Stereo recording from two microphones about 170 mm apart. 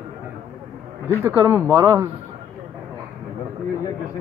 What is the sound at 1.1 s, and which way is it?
Speech, 15° right (ahead or behind).